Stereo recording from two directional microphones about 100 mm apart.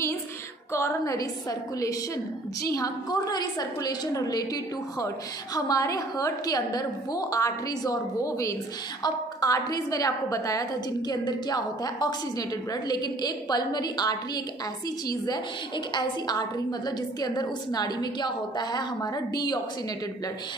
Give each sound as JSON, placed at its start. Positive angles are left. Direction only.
{"t": 0.7, "sound": "a woman's voice", "side_deg": 30}